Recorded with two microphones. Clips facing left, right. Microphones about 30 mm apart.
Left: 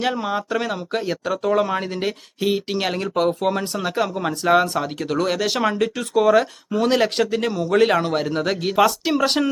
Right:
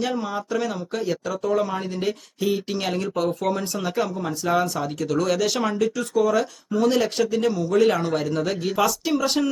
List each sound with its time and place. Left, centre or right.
0.0 s speech: left
4.2 s speech: left